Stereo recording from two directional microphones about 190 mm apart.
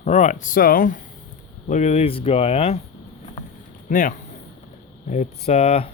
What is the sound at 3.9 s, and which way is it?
Speech, 45° left (ahead or behind).